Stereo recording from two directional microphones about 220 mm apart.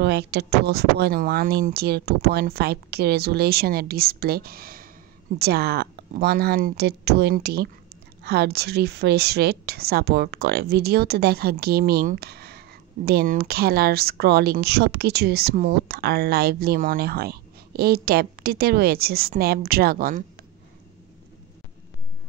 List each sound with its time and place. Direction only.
0.0 s a woman's voice: 45° right (ahead or behind)